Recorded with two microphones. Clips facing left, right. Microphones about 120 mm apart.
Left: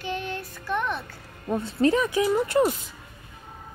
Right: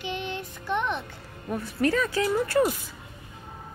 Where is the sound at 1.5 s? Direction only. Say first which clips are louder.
Left 3 dB; 25° left (ahead or behind).